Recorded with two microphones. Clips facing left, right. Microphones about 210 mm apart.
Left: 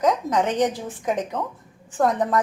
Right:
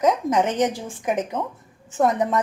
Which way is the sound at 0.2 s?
30° right (ahead or behind).